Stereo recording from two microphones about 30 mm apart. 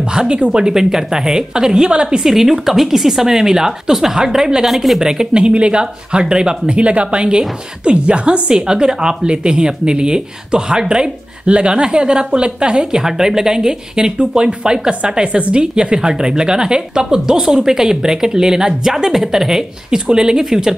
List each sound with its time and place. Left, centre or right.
0.1 s a sound: right
0.5 s a woman's voice: right
2.2 s speech: centre
4.6 s speech: centre
5.0 s a woman's voice: right
5.4 s speech: right
6.7 s a woman's voice: right
12.7 s a woman's voice: centre